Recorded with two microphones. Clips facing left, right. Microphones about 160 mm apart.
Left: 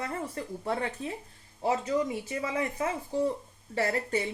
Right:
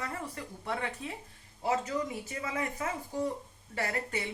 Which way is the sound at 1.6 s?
20° left (ahead or behind).